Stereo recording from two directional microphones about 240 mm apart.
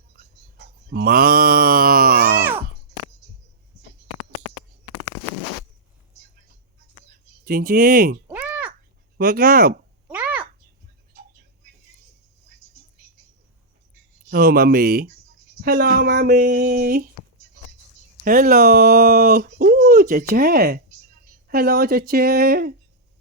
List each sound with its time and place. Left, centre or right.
0.2 s mantra: right
7.4 s speech: right
8.3 s a sound: centre
9.1 s speech: right
10.1 s a sound: centre
14.3 s speech: right
18.3 s speech: right